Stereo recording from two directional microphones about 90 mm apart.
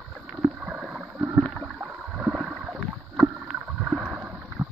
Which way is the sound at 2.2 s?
10° right (ahead or behind).